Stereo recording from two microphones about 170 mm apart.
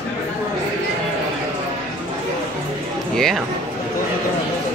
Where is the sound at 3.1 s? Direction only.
5° left (ahead or behind).